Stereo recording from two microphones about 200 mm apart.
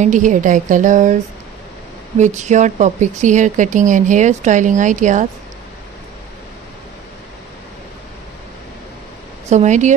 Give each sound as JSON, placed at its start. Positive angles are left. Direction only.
{"t": 0.0, "sound": "speech", "side_deg": -40}
{"t": 2.1, "sound": "speech", "side_deg": -35}
{"t": 9.5, "sound": "speech", "side_deg": -35}